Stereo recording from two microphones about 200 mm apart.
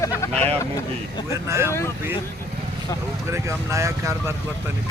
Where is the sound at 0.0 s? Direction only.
15° left (ahead or behind).